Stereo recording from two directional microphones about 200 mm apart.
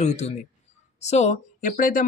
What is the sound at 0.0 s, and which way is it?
Speech, 35° left (ahead or behind).